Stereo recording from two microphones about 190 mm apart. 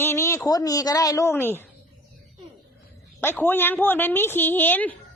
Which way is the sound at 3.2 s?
10° left (ahead or behind).